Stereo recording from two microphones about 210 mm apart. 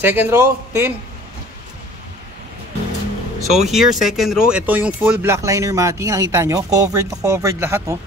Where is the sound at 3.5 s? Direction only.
Centre (ahead or behind).